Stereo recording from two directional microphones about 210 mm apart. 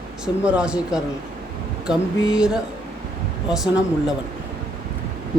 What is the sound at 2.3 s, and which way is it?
A man's voice, 5° right (ahead or behind).